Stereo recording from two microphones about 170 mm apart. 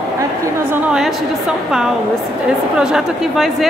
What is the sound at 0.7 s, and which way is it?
Speech, 5° right (ahead or behind).